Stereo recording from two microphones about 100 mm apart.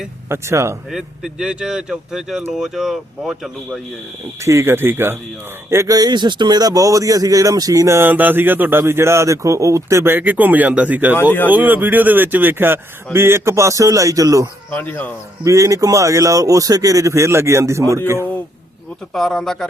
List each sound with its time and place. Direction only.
0.3 s speech: 30° right (ahead or behind)
0.9 s speech: 5° right (ahead or behind)
4.4 s speech: 30° right (ahead or behind)
6.0 s speech: 45° right (ahead or behind); by 11.2 s 15° right (ahead or behind)
11.2 s speech: 20° left (ahead or behind)
11.4 s a man's voice: 15° right (ahead or behind); by 14.5 s 35° right (ahead or behind)
14.7 s speech: 15° left (ahead or behind)
15.4 s a man's voice: 30° right (ahead or behind)
19.1 s speech: 5° left (ahead or behind)